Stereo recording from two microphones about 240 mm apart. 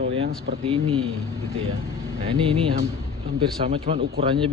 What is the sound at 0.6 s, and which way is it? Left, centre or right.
Speech, right.